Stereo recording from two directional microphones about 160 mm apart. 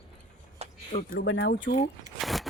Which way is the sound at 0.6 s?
40° right (ahead or behind).